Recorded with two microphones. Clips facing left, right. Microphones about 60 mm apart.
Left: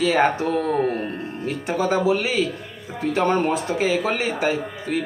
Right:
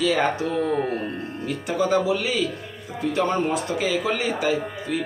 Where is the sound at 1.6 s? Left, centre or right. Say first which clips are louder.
Left 1 dB; left.